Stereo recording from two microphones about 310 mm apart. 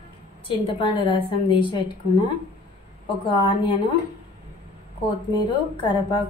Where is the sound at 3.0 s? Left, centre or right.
Centre.